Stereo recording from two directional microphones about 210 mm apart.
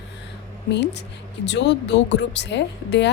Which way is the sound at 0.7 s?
55° left (ahead or behind).